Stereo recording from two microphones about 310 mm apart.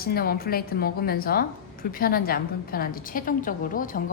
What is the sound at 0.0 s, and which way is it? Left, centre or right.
A woman's voice, left.